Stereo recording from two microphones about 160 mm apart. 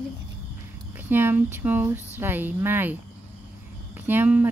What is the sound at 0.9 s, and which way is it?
Speech, 10° right (ahead or behind).